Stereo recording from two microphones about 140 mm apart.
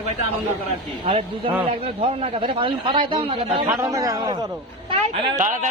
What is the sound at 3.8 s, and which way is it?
Speech, 25° right (ahead or behind).